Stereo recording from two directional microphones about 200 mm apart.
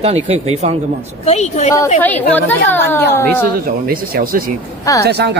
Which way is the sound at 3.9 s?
45° right (ahead or behind).